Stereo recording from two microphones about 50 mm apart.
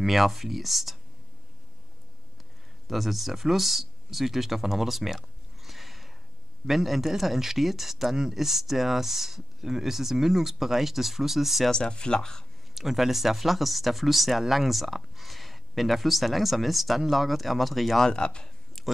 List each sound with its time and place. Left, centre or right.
0.0 s speech: centre
2.9 s speech: centre
11.7 s speech: centre
12.7 s speech: centre
18.0 s speech: centre